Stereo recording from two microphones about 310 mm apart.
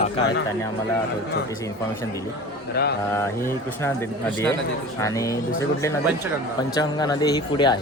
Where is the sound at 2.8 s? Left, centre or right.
Left.